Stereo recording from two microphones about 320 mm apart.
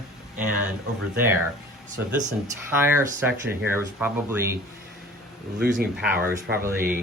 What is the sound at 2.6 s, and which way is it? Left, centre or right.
Speech, centre.